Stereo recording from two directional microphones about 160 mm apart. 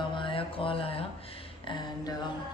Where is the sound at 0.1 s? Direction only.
30° left (ahead or behind).